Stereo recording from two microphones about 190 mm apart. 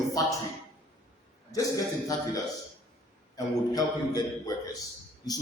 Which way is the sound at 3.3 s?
20° left (ahead or behind).